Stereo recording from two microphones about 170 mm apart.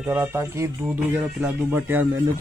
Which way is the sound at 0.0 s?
10° right (ahead or behind).